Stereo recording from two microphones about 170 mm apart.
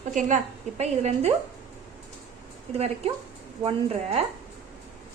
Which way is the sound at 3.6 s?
35° right (ahead or behind).